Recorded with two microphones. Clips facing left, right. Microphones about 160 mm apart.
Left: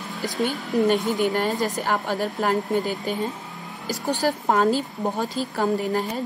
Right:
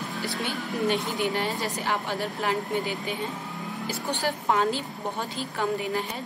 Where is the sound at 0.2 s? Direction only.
40° left (ahead or behind).